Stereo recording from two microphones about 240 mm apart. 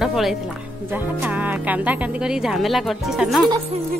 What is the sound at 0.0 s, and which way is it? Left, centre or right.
Speech, centre.